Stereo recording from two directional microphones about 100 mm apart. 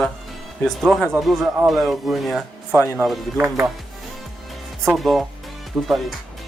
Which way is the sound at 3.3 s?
25° right (ahead or behind).